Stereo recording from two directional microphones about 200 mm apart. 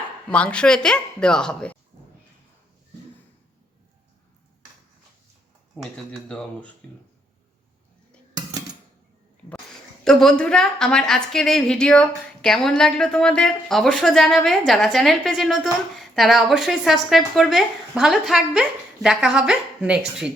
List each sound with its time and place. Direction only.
0.3 s a woman's voice: 5° left (ahead or behind)
5.7 s a woman's voice: 5° left (ahead or behind)
10.0 s a woman's voice: centre (ahead or behind)